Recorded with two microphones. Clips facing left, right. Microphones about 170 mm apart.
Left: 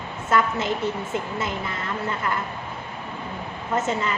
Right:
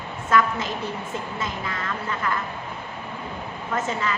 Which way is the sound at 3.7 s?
25° left (ahead or behind).